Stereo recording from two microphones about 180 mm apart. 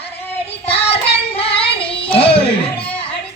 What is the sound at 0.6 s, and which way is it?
Child singing, 35° left (ahead or behind).